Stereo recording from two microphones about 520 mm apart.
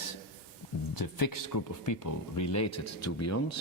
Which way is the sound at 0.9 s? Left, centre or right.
Left.